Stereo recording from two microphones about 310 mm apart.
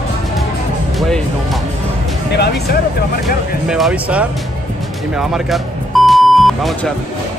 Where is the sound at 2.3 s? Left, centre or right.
Left.